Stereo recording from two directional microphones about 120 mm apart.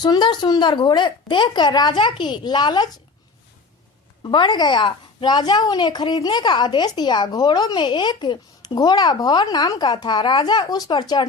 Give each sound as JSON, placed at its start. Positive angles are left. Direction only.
{"t": 0.0, "sound": "a woman's voice", "side_deg": 35}
{"t": 4.2, "sound": "a woman's voice", "side_deg": 40}